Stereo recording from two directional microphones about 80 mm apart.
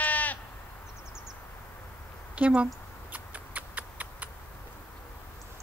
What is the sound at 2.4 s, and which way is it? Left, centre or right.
Speech, centre.